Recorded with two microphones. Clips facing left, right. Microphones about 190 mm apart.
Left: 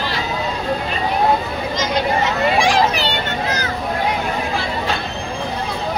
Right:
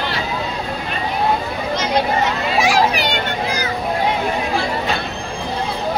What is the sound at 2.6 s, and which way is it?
Children playing, 10° right (ahead or behind).